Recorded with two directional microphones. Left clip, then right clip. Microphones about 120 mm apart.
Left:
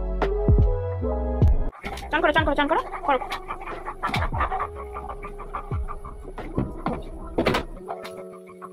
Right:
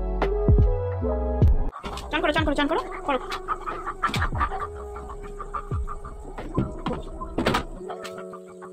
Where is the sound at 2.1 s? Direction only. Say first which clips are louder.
Left 3 dB; 15° right (ahead or behind).